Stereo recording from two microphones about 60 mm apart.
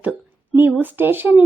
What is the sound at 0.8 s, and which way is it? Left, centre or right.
Speech, right.